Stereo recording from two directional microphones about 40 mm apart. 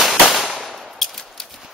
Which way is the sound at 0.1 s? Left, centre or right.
Centre.